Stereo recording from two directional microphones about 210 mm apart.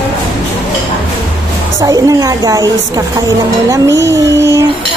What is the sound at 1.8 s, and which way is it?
Speech, 15° right (ahead or behind).